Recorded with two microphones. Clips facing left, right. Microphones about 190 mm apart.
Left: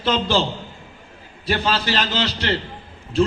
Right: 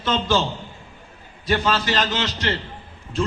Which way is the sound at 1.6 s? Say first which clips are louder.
Even; 30° left (ahead or behind).